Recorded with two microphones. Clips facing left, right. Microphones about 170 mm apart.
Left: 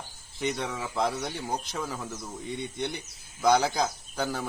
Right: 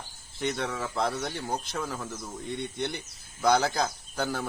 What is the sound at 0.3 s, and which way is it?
Speech, 5° left (ahead or behind).